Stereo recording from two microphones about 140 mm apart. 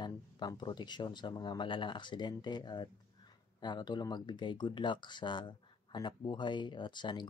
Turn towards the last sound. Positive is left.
turn(degrees=35)  # may be behind; listen again after turning